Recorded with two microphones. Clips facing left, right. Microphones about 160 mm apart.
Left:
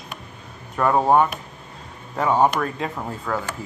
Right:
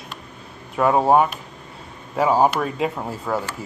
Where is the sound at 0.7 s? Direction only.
5° right (ahead or behind).